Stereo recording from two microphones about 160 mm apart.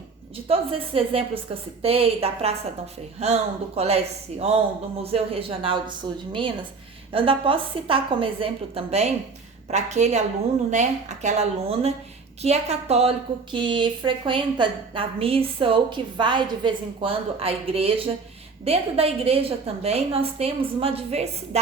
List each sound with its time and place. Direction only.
0.4 s a woman's voice: 35° right (ahead or behind)